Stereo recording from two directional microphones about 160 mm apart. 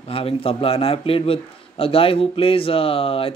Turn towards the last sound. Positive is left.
turn(degrees=35)  # may be behind; listen again after turning